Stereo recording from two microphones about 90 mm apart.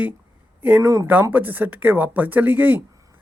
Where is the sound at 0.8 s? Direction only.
35° right (ahead or behind).